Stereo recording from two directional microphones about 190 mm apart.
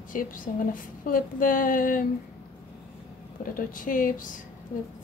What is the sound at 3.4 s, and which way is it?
Speech, 45° left (ahead or behind).